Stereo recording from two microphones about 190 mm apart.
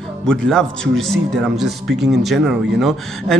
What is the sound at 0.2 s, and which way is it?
A man's voice, 5° left (ahead or behind).